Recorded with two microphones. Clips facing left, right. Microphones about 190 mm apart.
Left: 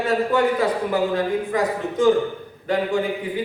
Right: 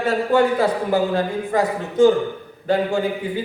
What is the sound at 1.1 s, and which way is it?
Speech, 30° right (ahead or behind).